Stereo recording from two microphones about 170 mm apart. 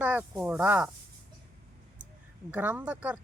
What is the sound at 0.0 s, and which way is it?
Speech, 10° right (ahead or behind).